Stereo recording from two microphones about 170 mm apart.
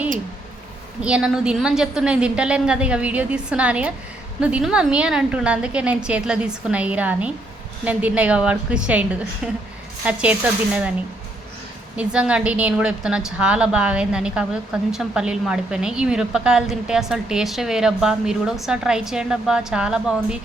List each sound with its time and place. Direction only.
1.0 s a woman's voice: 5° right (ahead or behind)
11.9 s a woman's voice: 5° right (ahead or behind)